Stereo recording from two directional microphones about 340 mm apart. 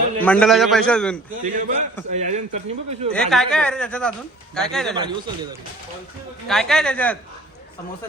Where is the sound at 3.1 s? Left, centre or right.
Centre.